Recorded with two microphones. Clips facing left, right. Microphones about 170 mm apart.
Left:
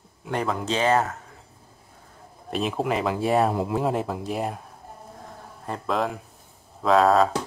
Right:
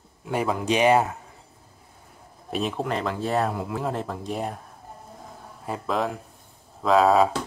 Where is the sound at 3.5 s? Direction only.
25° left (ahead or behind).